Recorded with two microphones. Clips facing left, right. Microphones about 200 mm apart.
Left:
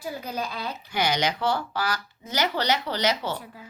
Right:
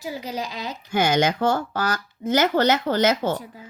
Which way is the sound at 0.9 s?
50° right (ahead or behind).